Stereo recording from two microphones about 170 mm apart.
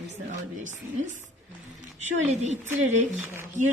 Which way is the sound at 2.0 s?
45° right (ahead or behind).